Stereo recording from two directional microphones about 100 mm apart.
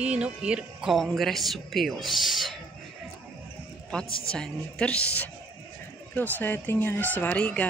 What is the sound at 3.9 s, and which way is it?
Speech, 10° left (ahead or behind).